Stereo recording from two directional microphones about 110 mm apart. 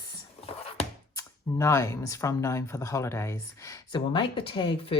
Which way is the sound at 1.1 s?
25° left (ahead or behind).